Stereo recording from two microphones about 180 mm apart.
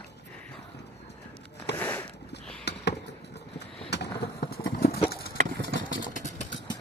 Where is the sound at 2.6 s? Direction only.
70° left (ahead or behind).